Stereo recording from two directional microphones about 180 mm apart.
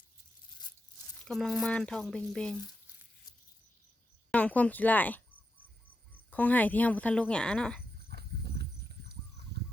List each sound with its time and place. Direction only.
1.2 s speech: centre (ahead or behind)
4.3 s speech: 5° left (ahead or behind)
6.3 s speech: 10° left (ahead or behind)
8.1 s horse: 65° right (ahead or behind)